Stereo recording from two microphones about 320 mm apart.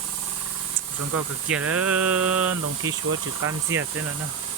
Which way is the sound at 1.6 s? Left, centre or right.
Right.